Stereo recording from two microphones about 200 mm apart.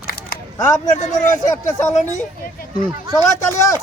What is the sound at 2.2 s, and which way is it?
Hubbub, 45° left (ahead or behind).